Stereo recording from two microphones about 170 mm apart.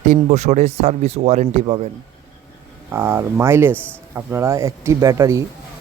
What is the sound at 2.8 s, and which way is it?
Speech, 15° right (ahead or behind).